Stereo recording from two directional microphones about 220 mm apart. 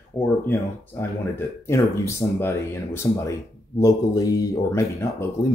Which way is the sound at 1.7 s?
15° left (ahead or behind).